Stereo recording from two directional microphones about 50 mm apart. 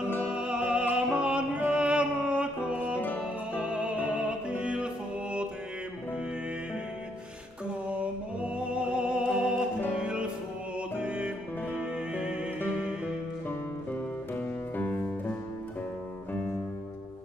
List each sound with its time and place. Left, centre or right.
0.3 s music: right
8.0 s music: right
14.3 s music: left